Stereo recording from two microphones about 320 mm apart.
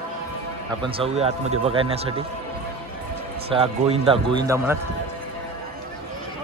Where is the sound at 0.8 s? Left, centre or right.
Centre.